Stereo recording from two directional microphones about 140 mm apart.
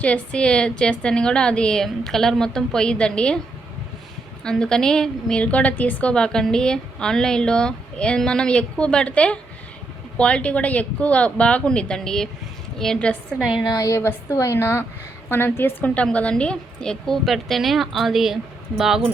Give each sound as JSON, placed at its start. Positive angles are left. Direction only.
{"t": 0.0, "sound": "a woman's voice", "side_deg": 10}
{"t": 4.4, "sound": "a woman's voice", "side_deg": 5}
{"t": 13.6, "sound": "a woman's voice", "side_deg": 25}